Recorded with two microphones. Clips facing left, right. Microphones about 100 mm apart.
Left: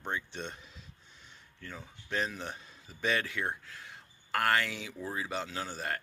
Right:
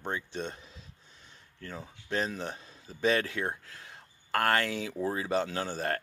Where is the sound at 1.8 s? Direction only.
35° right (ahead or behind).